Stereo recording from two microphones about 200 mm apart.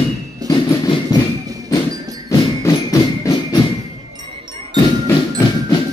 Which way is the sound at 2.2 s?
15° left (ahead or behind).